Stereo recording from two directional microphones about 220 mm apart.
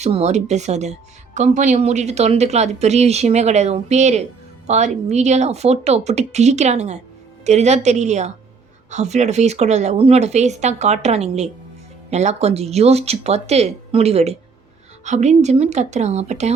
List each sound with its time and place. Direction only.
0.0 s speech: 30° right (ahead or behind)